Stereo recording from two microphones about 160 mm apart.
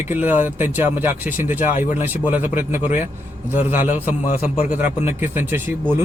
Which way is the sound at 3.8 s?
50° left (ahead or behind).